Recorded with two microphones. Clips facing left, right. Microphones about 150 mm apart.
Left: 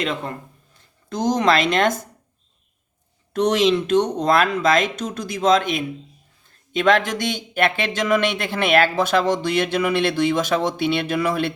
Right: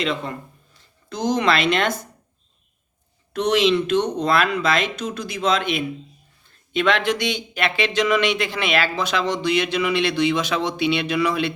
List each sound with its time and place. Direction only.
0.0 s speech: 50° left (ahead or behind)
3.3 s speech: 45° left (ahead or behind)